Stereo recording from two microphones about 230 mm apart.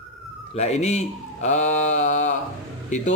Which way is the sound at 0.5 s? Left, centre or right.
Left.